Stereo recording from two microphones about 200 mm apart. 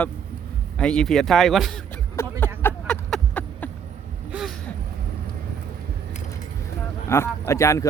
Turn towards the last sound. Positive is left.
turn(degrees=15)  # may be behind; listen again after turning